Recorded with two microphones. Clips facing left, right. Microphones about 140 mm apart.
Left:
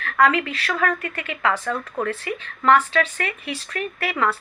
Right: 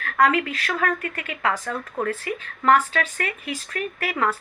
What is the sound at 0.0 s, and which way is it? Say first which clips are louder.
A woman's voice: left 1 dB; 45° right (ahead or behind).